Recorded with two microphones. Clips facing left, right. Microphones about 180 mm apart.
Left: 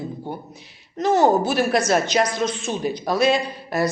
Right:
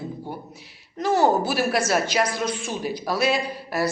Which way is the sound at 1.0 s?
20° left (ahead or behind).